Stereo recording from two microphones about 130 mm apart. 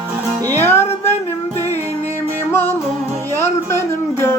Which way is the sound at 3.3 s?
20° left (ahead or behind).